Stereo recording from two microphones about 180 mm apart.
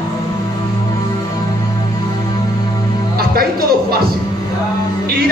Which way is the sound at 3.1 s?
55° right (ahead or behind).